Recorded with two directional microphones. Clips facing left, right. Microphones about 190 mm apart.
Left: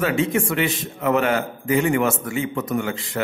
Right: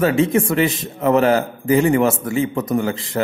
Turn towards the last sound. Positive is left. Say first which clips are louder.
# right 4 dB
turn(degrees=-35)  # may be behind; listen again after turning